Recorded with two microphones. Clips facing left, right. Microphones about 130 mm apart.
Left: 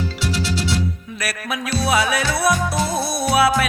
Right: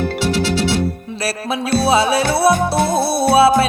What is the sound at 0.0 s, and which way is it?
Music, 60° right (ahead or behind).